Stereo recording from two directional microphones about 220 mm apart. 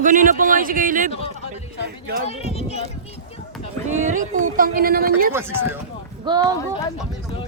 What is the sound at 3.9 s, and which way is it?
Speech, 35° right (ahead or behind).